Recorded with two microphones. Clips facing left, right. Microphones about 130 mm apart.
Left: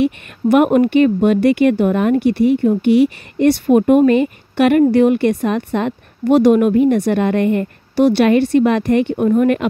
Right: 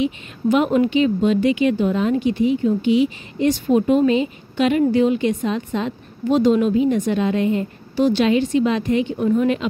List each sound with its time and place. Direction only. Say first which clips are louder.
0.0 s a woman's voice: left 4 dB; 60° left (ahead or behind)